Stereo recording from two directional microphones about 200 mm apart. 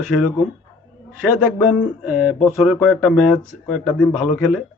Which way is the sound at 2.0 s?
5° right (ahead or behind).